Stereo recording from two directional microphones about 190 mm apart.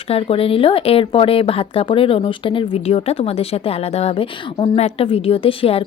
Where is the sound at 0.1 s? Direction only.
30° left (ahead or behind).